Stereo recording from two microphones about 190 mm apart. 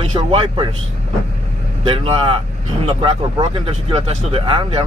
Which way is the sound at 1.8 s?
30° right (ahead or behind).